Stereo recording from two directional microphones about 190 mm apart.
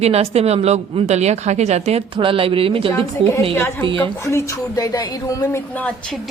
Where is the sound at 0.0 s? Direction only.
35° right (ahead or behind).